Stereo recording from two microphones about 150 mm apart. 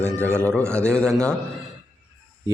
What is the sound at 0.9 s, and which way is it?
Speech, 5° left (ahead or behind).